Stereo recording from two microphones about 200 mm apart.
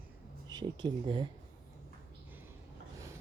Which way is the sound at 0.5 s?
25° right (ahead or behind).